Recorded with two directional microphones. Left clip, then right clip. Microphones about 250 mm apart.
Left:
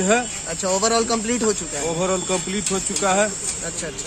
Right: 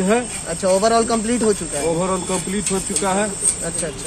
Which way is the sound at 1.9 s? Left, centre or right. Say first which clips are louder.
Right 1 dB; left.